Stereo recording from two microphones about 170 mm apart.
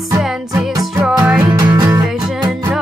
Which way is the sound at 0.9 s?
15° right (ahead or behind).